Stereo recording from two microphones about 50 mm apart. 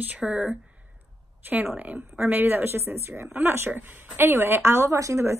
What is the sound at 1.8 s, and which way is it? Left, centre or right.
Speech, right.